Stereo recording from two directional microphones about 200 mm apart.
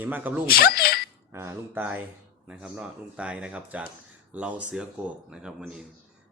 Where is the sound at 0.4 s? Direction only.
50° left (ahead or behind).